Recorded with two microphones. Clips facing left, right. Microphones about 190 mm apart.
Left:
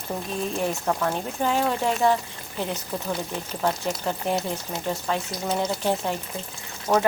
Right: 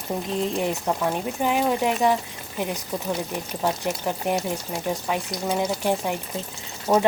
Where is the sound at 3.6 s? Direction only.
10° right (ahead or behind).